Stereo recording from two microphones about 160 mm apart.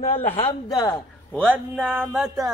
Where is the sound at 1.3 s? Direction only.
10° right (ahead or behind).